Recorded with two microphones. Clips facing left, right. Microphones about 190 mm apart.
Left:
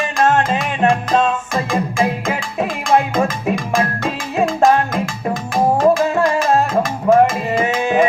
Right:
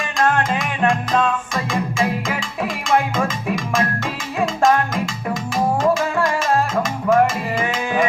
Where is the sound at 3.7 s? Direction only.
35° left (ahead or behind).